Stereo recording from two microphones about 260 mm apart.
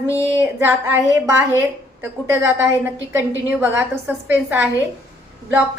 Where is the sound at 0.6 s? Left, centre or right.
Centre.